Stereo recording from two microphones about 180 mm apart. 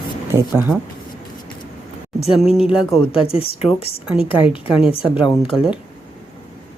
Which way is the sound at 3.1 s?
30° left (ahead or behind).